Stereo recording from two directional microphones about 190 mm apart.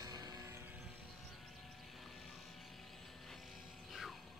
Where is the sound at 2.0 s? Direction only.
Centre (ahead or behind).